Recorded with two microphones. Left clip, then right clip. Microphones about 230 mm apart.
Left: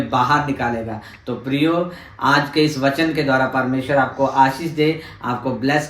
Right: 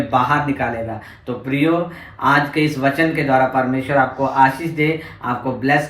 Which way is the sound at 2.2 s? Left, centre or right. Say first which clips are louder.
Even; left.